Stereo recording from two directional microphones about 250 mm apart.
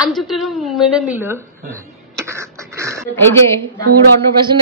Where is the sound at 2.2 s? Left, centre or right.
Centre.